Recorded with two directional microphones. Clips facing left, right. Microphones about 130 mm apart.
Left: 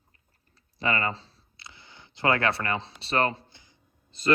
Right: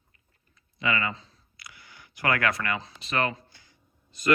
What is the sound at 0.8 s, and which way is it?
Speech, 35° left (ahead or behind).